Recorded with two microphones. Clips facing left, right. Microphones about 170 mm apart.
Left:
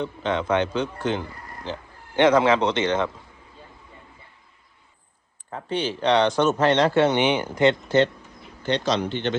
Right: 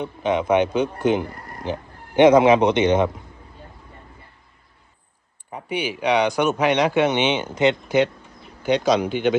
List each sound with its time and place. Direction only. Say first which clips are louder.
0.0 s speech: right 3 dB; 15° right (ahead or behind)
5.5 s speech: even; 15° right (ahead or behind)